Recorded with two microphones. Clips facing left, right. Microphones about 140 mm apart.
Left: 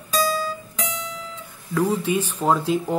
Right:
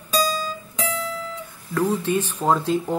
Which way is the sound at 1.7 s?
10° left (ahead or behind).